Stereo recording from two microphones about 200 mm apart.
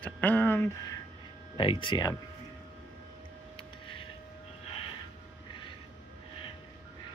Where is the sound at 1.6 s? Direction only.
25° left (ahead or behind).